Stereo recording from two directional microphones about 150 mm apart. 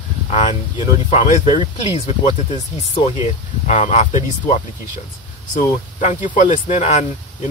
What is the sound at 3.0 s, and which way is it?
Speech, 50° left (ahead or behind).